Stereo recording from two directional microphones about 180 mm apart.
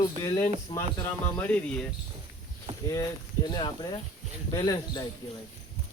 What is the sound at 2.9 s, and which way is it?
Speech, 20° left (ahead or behind).